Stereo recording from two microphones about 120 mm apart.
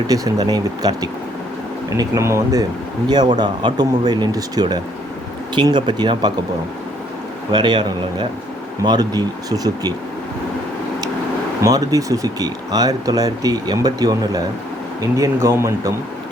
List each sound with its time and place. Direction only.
0.1 s speech: 30° right (ahead or behind)
7.5 s speech: 40° right (ahead or behind)
11.6 s speech: 30° right (ahead or behind)